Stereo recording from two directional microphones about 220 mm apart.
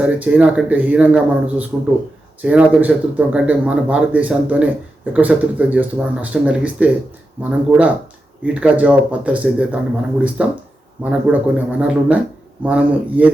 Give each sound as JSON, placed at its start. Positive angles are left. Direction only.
{"t": 0.0, "sound": "speech", "side_deg": -5}